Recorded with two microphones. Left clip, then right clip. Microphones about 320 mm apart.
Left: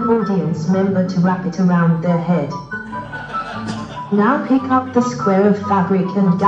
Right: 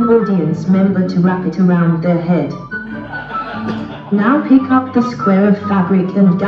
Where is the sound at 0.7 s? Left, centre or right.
Centre.